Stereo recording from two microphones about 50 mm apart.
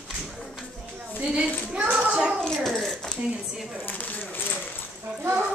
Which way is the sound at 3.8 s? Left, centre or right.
Left.